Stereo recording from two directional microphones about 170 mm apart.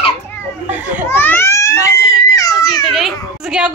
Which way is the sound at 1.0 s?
10° left (ahead or behind).